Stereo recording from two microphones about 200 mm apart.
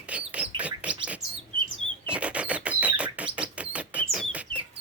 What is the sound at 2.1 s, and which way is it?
Chirp, 5° right (ahead or behind).